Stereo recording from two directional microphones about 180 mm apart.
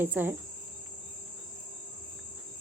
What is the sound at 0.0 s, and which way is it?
Speech, 10° right (ahead or behind).